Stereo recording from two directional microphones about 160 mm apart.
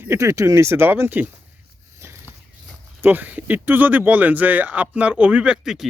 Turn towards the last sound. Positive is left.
turn(degrees=-5)  # may be behind; listen again after turning